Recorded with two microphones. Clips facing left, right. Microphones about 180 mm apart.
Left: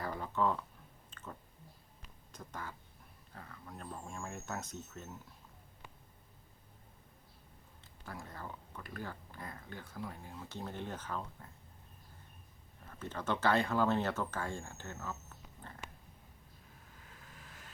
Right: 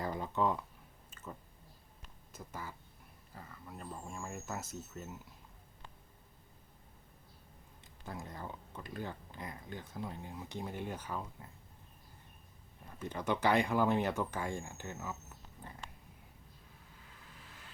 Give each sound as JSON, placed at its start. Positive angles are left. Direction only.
{"t": 0.0, "sound": "a sound", "side_deg": -20}
{"t": 1.1, "sound": "chewing", "side_deg": -10}
{"t": 2.0, "sound": "a sound", "side_deg": -5}
{"t": 3.3, "sound": "speech", "side_deg": -5}
{"t": 8.0, "sound": "speech", "side_deg": -20}
{"t": 13.0, "sound": "speech", "side_deg": -15}